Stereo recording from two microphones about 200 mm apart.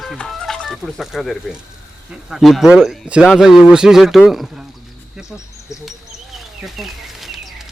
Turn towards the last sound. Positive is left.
turn(degrees=0)  # may be behind; listen again after turning